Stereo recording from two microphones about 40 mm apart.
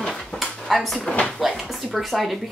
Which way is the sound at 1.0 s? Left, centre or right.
Left.